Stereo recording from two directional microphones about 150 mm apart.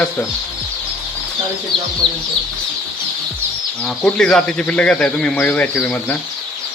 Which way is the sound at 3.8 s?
5° left (ahead or behind).